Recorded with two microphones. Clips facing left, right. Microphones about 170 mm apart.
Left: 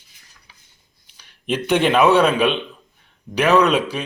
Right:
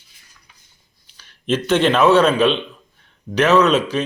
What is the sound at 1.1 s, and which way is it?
A man's voice, 15° left (ahead or behind).